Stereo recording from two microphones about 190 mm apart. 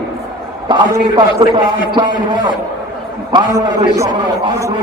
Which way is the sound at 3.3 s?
15° right (ahead or behind).